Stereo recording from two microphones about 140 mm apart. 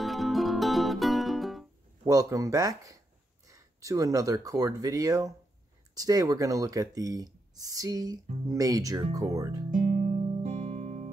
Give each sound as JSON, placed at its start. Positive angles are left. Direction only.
{"t": 0.0, "sound": "music", "side_deg": 0}
{"t": 2.0, "sound": "speech", "side_deg": -25}
{"t": 9.8, "sound": "guitar", "side_deg": -60}